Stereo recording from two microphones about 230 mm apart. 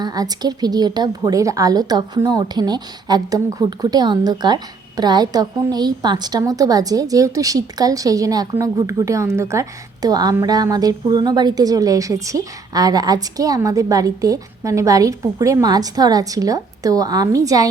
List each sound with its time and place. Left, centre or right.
0.0 s a woman's voice: centre